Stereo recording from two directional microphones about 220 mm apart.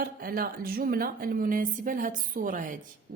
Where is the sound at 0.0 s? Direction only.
40° right (ahead or behind).